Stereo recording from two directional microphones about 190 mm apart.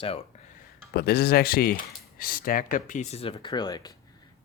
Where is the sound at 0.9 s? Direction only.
55° left (ahead or behind).